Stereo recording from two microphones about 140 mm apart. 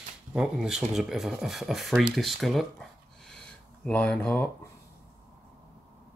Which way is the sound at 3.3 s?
5° left (ahead or behind).